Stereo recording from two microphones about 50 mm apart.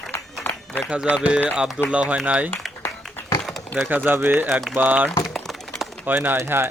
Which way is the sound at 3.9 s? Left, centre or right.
Right.